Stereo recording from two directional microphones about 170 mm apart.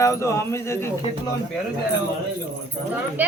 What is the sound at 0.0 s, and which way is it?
Speech, 15° left (ahead or behind).